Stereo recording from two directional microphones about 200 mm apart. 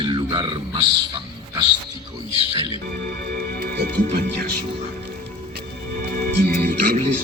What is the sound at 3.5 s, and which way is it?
Music, 50° right (ahead or behind).